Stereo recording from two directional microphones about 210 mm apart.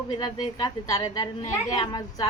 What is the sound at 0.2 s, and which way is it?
A woman's voice, 20° left (ahead or behind).